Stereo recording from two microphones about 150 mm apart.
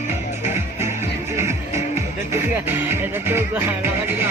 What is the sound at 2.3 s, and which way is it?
Music, 15° right (ahead or behind).